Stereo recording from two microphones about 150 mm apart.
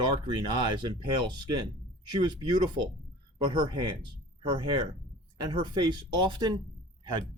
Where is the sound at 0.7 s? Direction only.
30° right (ahead or behind).